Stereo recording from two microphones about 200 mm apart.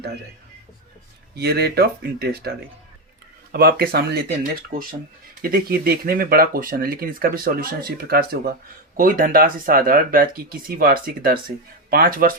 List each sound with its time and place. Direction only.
1.4 s speech: 55° right (ahead or behind)
3.5 s speech: 50° right (ahead or behind)
5.4 s speech: 50° right (ahead or behind)